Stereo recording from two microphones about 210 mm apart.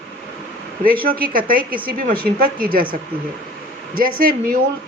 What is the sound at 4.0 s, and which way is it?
Speech, 45° right (ahead or behind).